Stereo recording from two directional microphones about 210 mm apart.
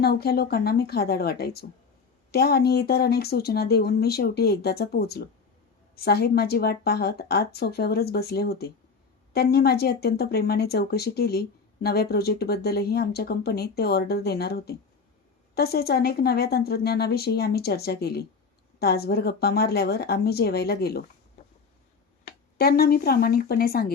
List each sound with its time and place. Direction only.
0.0 s speech: 50° left (ahead or behind)
22.5 s speech: 45° left (ahead or behind)